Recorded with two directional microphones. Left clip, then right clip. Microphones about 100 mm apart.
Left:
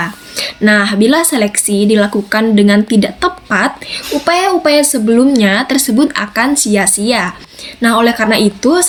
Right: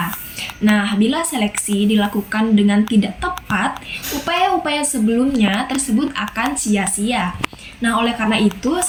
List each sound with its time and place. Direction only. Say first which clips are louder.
0.3 s a woman's voice: left 9 dB; 35° left (ahead or behind)